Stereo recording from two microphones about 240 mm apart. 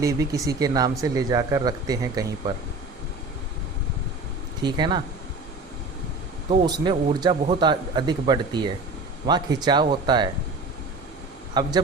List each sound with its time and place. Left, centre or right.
0.0 s speech: centre
4.6 s speech: centre
6.5 s speech: centre
11.6 s speech: centre